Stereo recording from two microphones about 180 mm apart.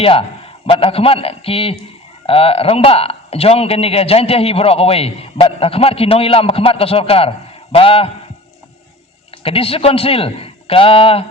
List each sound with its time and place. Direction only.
0.0 s a man's voice: 30° left (ahead or behind)
9.4 s a man's voice: 30° left (ahead or behind)